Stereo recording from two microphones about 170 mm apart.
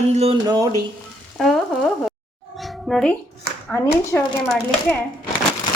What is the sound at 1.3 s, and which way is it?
Frying, centre (ahead or behind).